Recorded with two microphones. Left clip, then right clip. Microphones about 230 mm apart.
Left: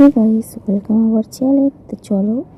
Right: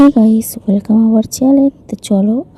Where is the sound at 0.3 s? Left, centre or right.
Right.